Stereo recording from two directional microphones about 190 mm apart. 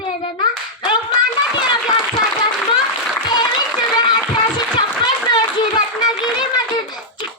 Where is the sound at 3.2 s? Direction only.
25° left (ahead or behind).